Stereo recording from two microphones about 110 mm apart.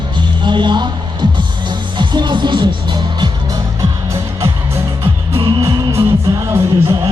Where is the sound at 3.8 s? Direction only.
30° right (ahead or behind).